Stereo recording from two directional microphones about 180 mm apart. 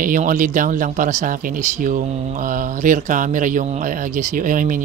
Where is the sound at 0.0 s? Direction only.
45° right (ahead or behind).